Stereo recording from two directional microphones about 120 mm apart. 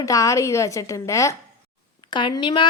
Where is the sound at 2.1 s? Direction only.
40° left (ahead or behind).